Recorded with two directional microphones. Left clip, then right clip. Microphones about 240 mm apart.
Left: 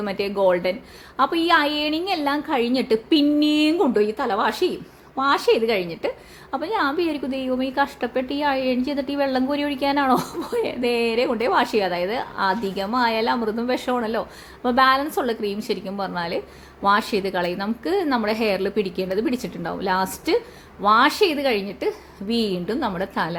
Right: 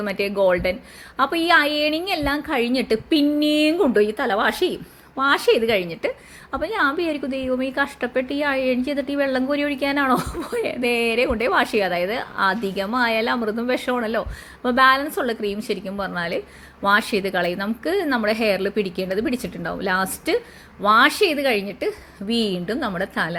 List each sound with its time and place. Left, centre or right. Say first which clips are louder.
0.0 s a woman's voice: right 1 dB; centre